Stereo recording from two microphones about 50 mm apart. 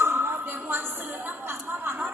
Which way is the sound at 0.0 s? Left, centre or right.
Right.